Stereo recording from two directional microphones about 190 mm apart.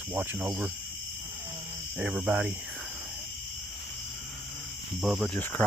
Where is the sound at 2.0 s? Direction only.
5° right (ahead or behind).